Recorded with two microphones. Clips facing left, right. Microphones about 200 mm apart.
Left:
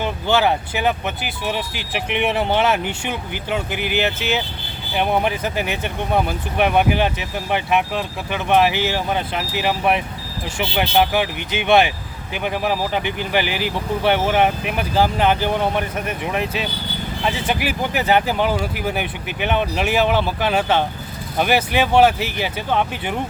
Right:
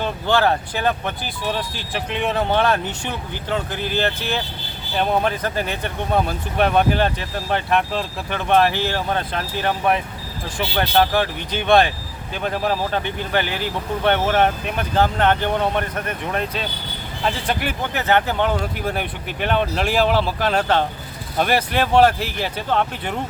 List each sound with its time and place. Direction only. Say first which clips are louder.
0.0 s speech: left 1 dB; 5° left (ahead or behind)
2.0 s speech: left 2 dB; 20° left (ahead or behind)
2.5 s speech: right 1 dB; 5° left (ahead or behind)
4.9 s speech: even; 10° left (ahead or behind)